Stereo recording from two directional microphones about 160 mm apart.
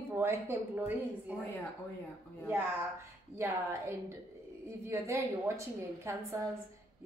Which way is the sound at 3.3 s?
15° right (ahead or behind).